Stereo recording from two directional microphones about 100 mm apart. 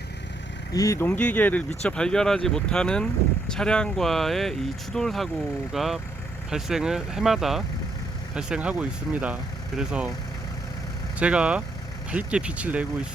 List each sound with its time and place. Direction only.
0.7 s speech: 35° left (ahead or behind)
0.9 s speech: 20° left (ahead or behind); by 10.1 s 10° right (ahead or behind)
11.2 s speech: 10° right (ahead or behind)